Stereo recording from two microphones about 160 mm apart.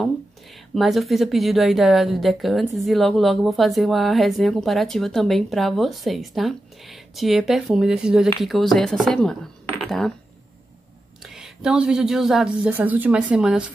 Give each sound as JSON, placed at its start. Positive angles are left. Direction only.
{"t": 0.7, "sound": "speech", "side_deg": 0}
{"t": 11.2, "sound": "speech", "side_deg": 0}